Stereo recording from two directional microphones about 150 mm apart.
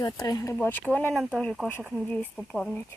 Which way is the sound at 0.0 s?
25° left (ahead or behind).